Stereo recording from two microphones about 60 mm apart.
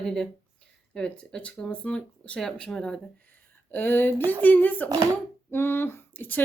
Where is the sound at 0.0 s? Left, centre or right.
Centre.